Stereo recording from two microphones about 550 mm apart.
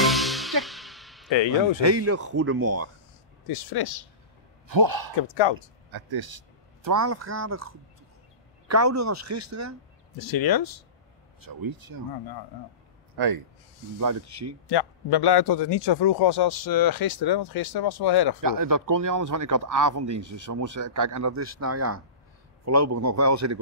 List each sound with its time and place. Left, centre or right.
0.0 s music: centre
1.3 s speech: left
1.8 s speech: right
3.4 s a man's voice: left
4.6 s a man's voice: right
10.3 s a man's voice: left
11.4 s speech: right
13.1 s a man's voice: right
13.9 s speech: right
14.7 s a man's voice: left
18.4 s speech: right